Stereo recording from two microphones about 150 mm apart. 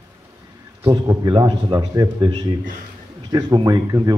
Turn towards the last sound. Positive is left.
turn(degrees=-30)  # may be behind; listen again after turning